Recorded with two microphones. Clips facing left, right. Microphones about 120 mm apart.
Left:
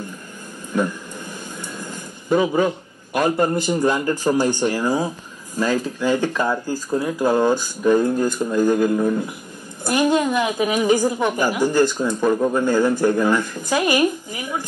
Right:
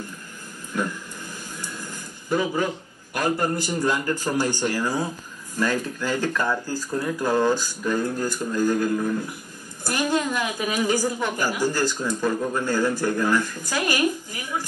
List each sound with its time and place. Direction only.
1.6 s a woman's voice: 20° left (ahead or behind)